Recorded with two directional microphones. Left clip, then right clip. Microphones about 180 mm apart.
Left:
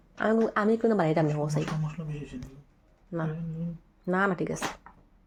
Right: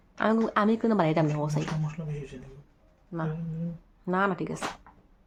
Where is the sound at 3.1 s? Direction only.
Centre (ahead or behind).